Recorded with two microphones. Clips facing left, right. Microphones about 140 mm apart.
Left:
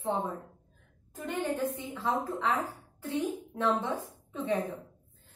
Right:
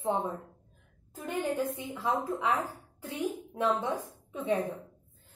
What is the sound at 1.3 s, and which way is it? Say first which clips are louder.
A woman's voice: right 1 dB; 10° right (ahead or behind).